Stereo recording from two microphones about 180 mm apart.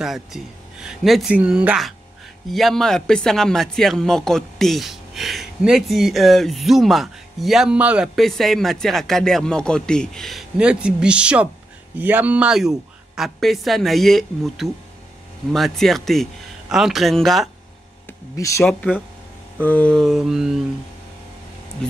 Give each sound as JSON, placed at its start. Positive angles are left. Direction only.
{"t": 0.0, "sound": "speech", "side_deg": 0}
{"t": 18.3, "sound": "speech", "side_deg": 15}